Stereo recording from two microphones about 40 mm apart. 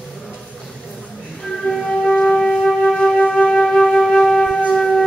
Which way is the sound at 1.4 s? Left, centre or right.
Centre.